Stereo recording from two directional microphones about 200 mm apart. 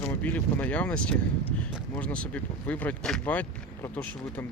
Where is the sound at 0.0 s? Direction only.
5° left (ahead or behind).